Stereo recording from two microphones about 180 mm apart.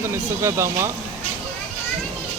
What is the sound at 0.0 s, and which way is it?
Speech, 15° right (ahead or behind).